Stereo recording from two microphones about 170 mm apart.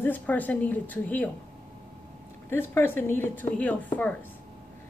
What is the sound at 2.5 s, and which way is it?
A woman's voice, 15° left (ahead or behind).